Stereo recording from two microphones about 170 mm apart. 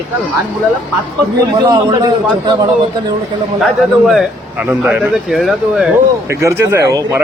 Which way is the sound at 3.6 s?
Centre (ahead or behind).